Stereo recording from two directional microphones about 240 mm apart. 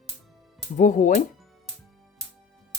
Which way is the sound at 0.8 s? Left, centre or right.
Left.